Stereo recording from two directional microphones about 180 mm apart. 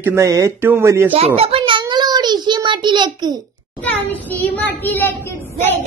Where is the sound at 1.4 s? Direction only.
30° right (ahead or behind).